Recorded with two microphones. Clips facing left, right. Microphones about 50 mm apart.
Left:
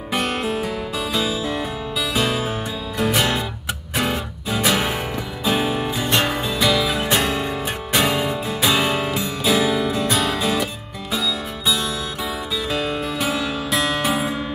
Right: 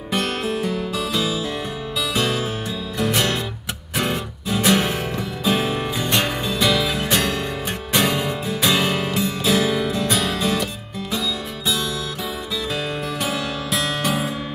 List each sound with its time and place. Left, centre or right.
0.1 s music: centre
6.1 s music: centre
6.5 s music: centre